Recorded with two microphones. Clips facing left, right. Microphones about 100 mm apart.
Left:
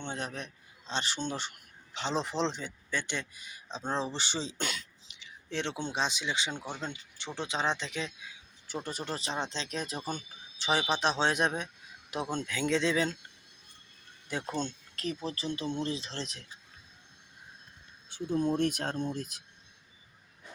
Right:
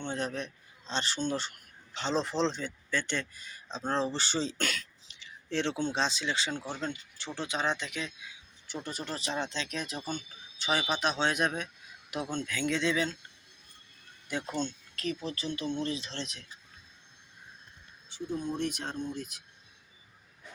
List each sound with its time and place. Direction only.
0.0 s a man's voice: 20° left (ahead or behind); by 13.1 s 35° left (ahead or behind)
14.3 s speech: 35° left (ahead or behind)
18.5 s speech: 50° left (ahead or behind)